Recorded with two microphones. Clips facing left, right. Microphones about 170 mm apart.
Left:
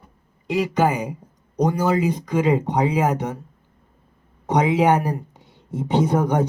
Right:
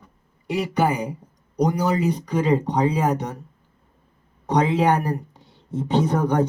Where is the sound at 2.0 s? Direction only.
10° left (ahead or behind).